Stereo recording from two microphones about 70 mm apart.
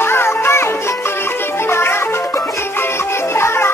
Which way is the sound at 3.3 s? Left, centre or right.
Left.